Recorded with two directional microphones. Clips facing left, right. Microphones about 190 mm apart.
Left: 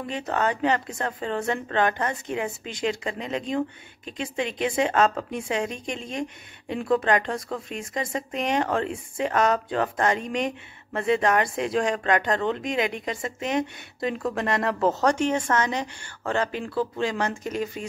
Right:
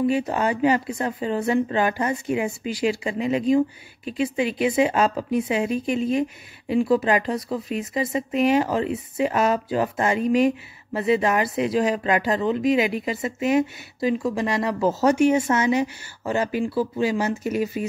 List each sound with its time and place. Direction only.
0.3 s speech: 10° right (ahead or behind)